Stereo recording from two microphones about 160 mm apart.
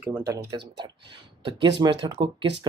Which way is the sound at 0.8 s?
30° right (ahead or behind).